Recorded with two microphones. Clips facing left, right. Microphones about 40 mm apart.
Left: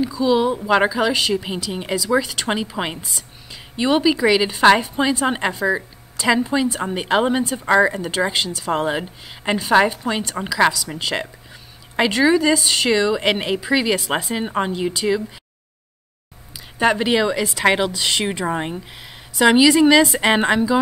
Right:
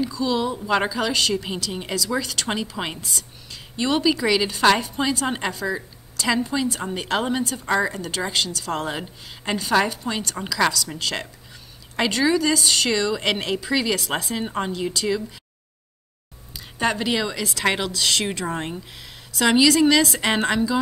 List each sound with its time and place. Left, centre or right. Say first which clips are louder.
0.0 s a woman's voice: left 5 dB; centre
16.7 s a woman's voice: left 5 dB; centre